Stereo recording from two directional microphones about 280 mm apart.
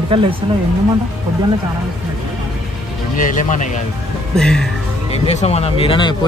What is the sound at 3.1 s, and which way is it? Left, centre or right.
Speech, left.